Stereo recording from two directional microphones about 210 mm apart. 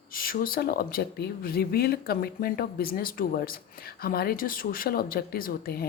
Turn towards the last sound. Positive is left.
turn(degrees=45)  # may be behind; listen again after turning